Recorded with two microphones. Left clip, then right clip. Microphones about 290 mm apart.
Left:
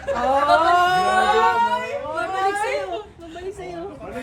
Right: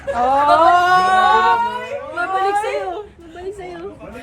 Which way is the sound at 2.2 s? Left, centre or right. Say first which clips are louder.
Right 5 dB; centre.